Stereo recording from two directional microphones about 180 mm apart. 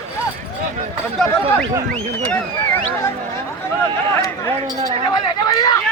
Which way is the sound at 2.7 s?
10° left (ahead or behind).